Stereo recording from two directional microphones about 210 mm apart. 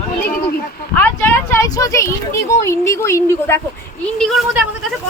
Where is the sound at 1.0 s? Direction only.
10° left (ahead or behind).